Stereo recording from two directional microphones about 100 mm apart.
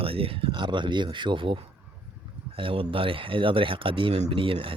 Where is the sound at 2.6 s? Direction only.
60° right (ahead or behind).